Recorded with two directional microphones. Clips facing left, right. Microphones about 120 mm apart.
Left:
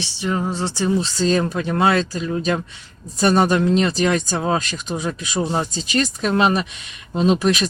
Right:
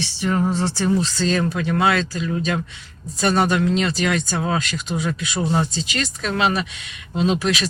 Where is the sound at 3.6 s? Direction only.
35° left (ahead or behind).